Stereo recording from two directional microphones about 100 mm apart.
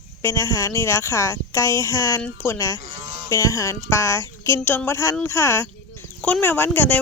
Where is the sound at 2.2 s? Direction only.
20° left (ahead or behind).